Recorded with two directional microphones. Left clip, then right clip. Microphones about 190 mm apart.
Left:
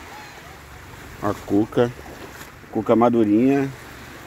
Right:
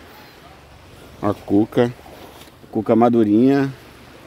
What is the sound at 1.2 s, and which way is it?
Speech, 45° right (ahead or behind).